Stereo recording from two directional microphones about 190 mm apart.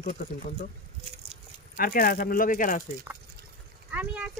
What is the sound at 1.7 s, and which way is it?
Speech, 50° left (ahead or behind).